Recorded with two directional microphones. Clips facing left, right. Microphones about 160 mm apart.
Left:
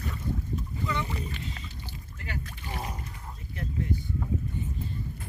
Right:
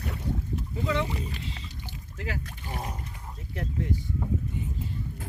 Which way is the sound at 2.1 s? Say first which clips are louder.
Right 4 dB; 90° right.